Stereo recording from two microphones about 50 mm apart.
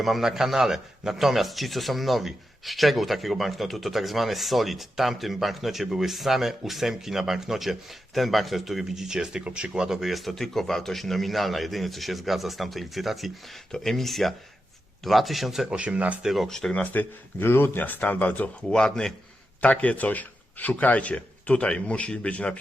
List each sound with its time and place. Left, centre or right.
0.0 s a man's voice: centre
10.1 s a man's voice: centre
13.7 s a man's voice: centre
15.6 s speech: right
16.2 s a man's voice: centre
16.5 s speech: centre
16.7 s speech: left
17.4 s speech: left
17.8 s speech: left
18.7 s speech: centre
19.6 s speech: left